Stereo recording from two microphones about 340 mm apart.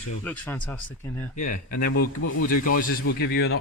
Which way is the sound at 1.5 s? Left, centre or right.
Left.